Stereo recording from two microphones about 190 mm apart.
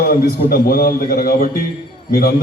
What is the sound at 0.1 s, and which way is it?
A man's voice, 50° left (ahead or behind).